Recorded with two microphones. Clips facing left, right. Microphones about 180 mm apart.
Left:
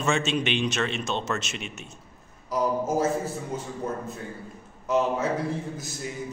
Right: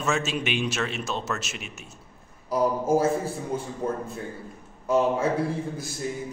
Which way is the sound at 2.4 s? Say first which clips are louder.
Right 2 dB; 30° right (ahead or behind).